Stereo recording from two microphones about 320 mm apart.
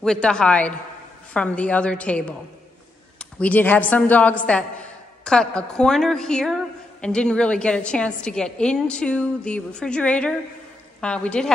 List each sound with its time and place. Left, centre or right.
0.0 s a woman's voice: centre